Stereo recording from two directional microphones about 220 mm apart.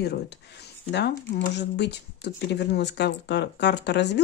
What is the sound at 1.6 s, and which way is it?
Speech, 50° left (ahead or behind).